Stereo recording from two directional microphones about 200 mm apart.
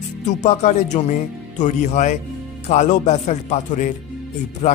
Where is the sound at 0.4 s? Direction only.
35° left (ahead or behind).